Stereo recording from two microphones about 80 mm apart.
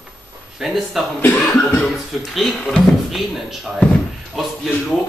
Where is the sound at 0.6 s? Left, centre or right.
Centre.